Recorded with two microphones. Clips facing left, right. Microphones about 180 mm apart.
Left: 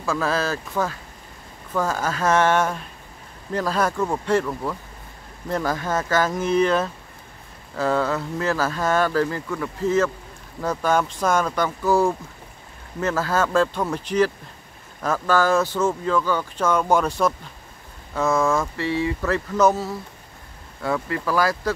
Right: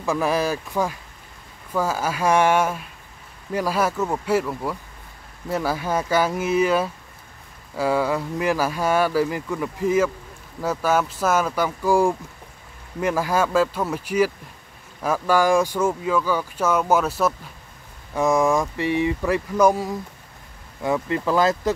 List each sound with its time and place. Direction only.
0.0 s speech: 15° right (ahead or behind)
18.1 s speech: 15° right (ahead or behind)